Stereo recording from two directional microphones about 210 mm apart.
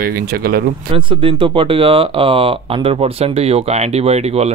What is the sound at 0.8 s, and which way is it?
Speech, 25° right (ahead or behind).